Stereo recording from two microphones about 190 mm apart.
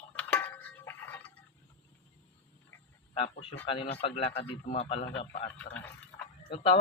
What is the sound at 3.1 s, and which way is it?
A man's voice, 30° left (ahead or behind).